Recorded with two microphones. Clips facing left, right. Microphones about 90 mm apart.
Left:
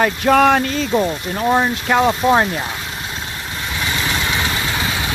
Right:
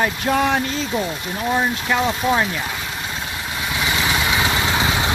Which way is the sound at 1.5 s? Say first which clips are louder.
Left 3 dB; 50° left (ahead or behind).